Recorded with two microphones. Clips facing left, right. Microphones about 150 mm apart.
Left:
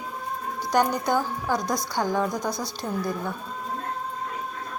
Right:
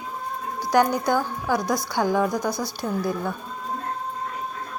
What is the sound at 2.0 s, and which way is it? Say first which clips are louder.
Speech: right 3 dB; 10° right (ahead or behind).